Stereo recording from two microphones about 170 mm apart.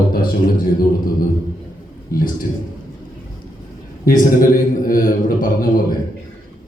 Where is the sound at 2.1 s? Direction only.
60° left (ahead or behind).